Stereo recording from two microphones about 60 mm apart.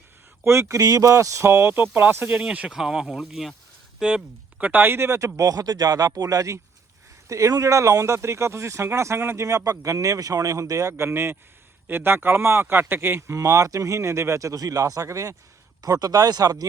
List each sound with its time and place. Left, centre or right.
0.4 s speech: right
0.8 s speech: right
1.5 s speech: right
2.7 s speech: centre
4.0 s speech: right
9.5 s speech: right
13.3 s speech: right
15.0 s speech: right
15.8 s speech: right